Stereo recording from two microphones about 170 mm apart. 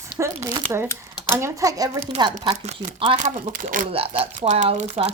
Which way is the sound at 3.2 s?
50° right (ahead or behind).